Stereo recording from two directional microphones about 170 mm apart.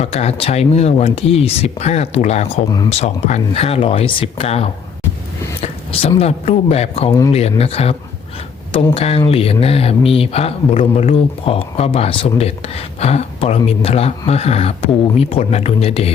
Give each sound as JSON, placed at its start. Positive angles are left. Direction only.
{"t": 0.0, "sound": "speech", "side_deg": 40}
{"t": 2.6, "sound": "speech", "side_deg": 20}
{"t": 2.9, "sound": "speech", "side_deg": 40}